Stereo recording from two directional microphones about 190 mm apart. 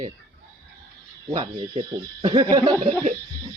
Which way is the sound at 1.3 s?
30° right (ahead or behind).